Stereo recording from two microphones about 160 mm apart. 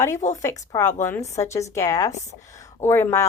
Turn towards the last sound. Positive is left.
turn(degrees=15)  # may be behind; listen again after turning